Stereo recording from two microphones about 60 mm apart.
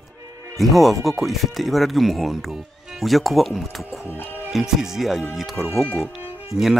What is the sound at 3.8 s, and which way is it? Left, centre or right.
Music, left.